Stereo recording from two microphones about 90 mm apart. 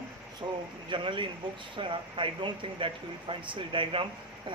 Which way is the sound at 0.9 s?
65° right (ahead or behind).